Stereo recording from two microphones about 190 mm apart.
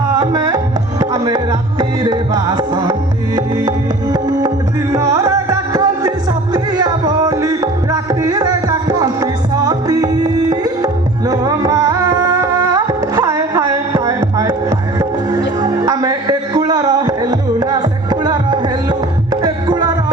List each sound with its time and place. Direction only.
0.2 s music: 20° right (ahead or behind)